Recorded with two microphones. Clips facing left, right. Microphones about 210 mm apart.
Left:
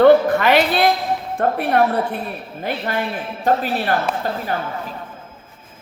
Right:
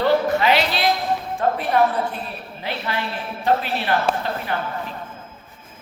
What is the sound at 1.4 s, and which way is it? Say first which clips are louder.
Speech: left 3 dB; 60° left (ahead or behind).